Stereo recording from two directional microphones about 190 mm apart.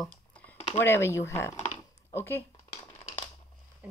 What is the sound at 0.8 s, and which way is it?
Speech, 15° left (ahead or behind).